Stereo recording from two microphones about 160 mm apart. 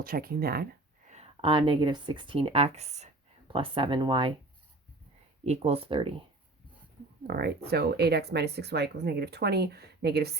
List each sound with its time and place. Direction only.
0.0 s speech: 65° right (ahead or behind)
1.0 s speech: 45° right (ahead or behind)
3.5 s speech: 35° right (ahead or behind)
5.4 s speech: 40° right (ahead or behind)
7.3 s speech: 75° right (ahead or behind); by 10.3 s 90° right